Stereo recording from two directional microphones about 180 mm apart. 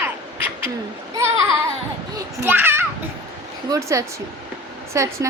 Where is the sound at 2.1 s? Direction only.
15° right (ahead or behind).